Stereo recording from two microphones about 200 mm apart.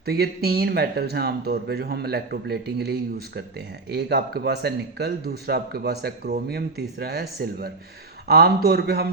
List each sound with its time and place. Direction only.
0.0 s speech: 50° right (ahead or behind)